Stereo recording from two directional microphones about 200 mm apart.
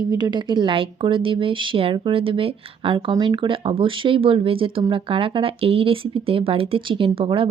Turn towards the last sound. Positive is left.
turn(degrees=-25)  # may be behind; listen again after turning